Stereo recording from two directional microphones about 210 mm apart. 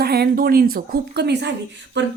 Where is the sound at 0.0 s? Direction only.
50° right (ahead or behind).